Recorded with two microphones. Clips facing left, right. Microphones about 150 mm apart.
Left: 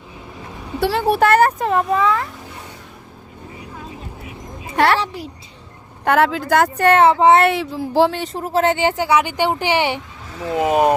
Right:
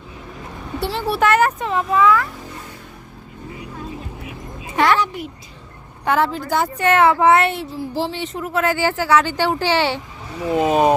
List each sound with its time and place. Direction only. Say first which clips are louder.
0.8 s speech: left 4 dB; 60° left (ahead or behind); by 2.2 s 30° left (ahead or behind)
4.9 s a sound: right 2 dB; 30° left (ahead or behind)
6.1 s speech: left 3 dB; 70° left (ahead or behind)
6.7 s a woman's voice: left 1 dB; 35° left (ahead or behind)
7.5 s speech: left 6 dB; 80° left
8.1 s a woman's voice: left 3 dB; 40° left (ahead or behind); by 10.8 s 15° left (ahead or behind)